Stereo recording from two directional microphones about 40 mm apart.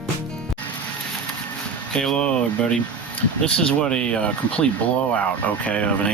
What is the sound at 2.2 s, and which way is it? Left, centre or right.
Speech, left.